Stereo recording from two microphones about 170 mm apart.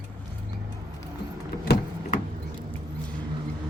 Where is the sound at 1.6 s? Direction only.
60° left (ahead or behind).